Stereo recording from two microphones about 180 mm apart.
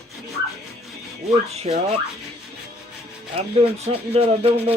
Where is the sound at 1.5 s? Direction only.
35° right (ahead or behind).